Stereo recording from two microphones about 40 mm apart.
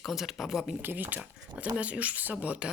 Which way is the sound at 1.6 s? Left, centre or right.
Right.